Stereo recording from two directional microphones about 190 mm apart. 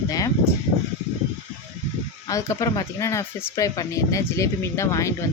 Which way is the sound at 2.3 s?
15° left (ahead or behind).